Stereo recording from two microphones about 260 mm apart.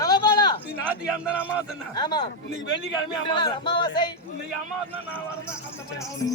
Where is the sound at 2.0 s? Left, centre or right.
Centre.